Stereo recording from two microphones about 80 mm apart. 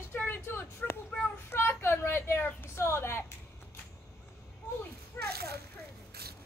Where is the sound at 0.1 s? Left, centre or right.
Left.